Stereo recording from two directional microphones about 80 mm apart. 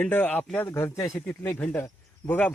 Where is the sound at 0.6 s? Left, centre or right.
Left; by 2.5 s centre.